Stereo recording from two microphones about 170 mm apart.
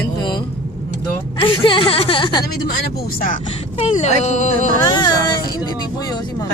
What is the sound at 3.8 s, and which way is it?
Speech, 40° left (ahead or behind).